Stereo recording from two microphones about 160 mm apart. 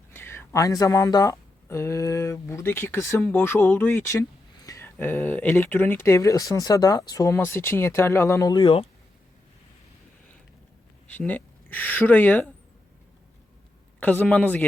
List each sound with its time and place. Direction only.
0.1 s speech: 15° left (ahead or behind); by 8.9 s 35° left (ahead or behind)
11.1 s speech: 10° left (ahead or behind)
14.0 s speech: 10° left (ahead or behind)